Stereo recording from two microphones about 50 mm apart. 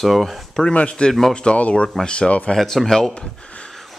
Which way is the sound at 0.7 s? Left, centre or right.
Left.